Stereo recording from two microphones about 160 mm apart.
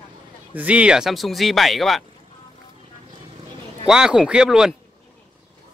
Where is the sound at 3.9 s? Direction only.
5° right (ahead or behind).